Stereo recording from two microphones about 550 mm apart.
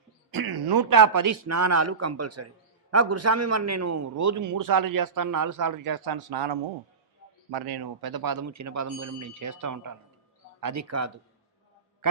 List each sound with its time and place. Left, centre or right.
0.3 s a man's voice: right